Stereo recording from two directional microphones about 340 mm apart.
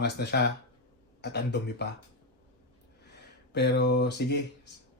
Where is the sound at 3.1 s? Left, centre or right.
Left.